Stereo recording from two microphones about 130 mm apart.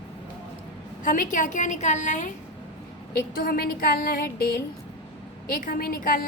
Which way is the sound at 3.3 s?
90° left.